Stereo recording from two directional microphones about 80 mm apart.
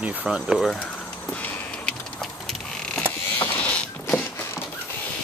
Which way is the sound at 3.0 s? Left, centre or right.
Left.